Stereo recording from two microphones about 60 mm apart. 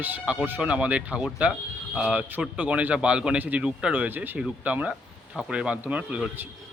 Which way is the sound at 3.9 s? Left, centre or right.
Right.